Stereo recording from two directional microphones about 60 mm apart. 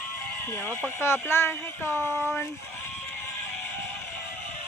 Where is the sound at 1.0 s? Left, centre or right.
Left.